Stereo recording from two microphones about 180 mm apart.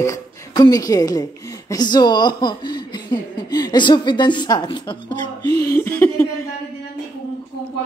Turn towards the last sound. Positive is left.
turn(degrees=15)  # may be behind; listen again after turning